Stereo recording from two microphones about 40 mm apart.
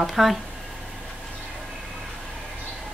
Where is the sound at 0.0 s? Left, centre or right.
Centre.